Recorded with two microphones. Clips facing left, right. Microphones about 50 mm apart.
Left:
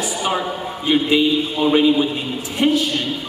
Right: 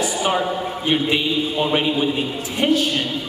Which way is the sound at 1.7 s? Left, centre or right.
Right.